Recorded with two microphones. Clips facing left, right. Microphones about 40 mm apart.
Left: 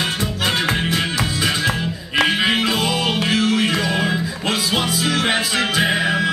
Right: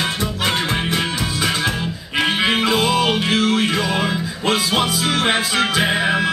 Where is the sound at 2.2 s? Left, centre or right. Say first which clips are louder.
Right 1 dB; right.